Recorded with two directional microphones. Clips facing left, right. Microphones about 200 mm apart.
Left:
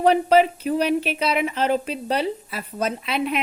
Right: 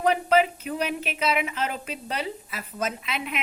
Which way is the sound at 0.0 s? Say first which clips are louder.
Left 5 dB; 35° left (ahead or behind).